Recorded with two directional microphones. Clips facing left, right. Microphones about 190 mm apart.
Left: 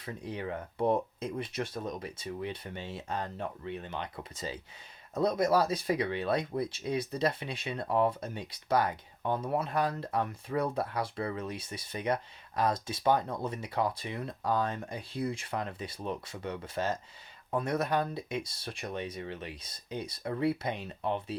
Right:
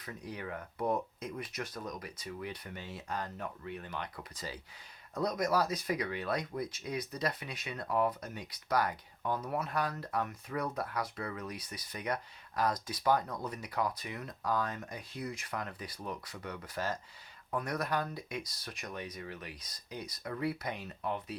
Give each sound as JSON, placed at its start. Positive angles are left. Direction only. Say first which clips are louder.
{"t": 0.0, "sound": "speech", "louder": "left 5 dB", "side_deg": 25}